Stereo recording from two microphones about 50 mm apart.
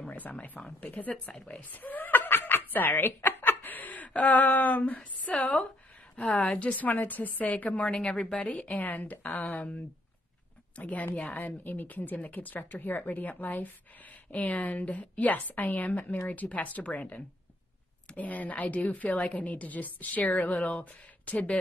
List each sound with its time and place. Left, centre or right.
0.1 s speech: left
1.6 s snicker: left
3.3 s chuckle: left
4.9 s a woman's voice: left
7.9 s a woman's voice: centre
8.5 s speech: left
10.8 s speech: left